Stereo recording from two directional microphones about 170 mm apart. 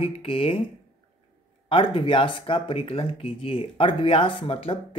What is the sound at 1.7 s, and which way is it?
Speech, 30° left (ahead or behind).